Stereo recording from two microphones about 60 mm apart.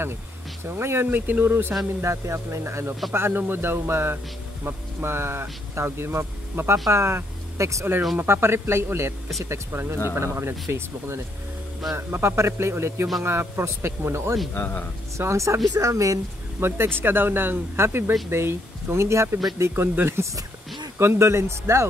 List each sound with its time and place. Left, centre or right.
0.7 s speech: right
2.0 s speech: right
8.2 s speech: right
14.5 s speech: left
15.1 s speech: right
15.7 s speech: right
16.5 s speech: right
19.6 s speech: right